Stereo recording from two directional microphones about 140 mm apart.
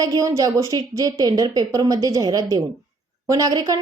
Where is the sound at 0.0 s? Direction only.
25° right (ahead or behind).